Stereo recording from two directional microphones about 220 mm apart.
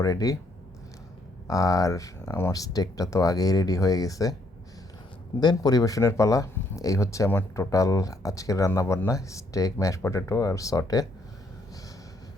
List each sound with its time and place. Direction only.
0.0 s speech: 15° left (ahead or behind)
1.5 s speech: 15° left (ahead or behind)
5.4 s speech: 20° left (ahead or behind)